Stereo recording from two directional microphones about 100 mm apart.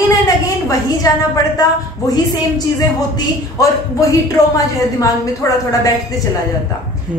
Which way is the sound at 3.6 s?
35° left (ahead or behind).